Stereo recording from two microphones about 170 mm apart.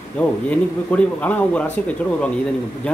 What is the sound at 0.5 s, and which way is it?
Speech, 10° left (ahead or behind).